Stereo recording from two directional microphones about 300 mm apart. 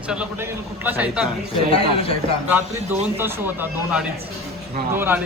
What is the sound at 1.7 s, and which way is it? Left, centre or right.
Speech, centre.